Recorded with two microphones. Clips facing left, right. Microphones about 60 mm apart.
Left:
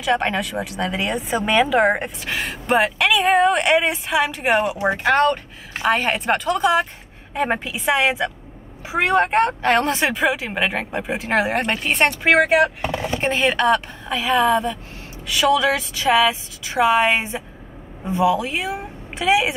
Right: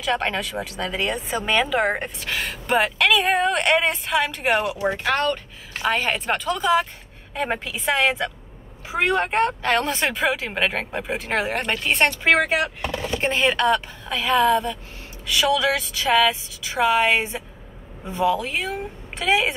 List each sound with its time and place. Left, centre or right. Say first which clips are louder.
0.0 s speech: left 3 dB; centre
4.6 s speech: left 3 dB; left